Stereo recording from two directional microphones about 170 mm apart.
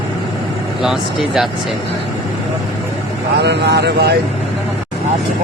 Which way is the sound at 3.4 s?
85° right.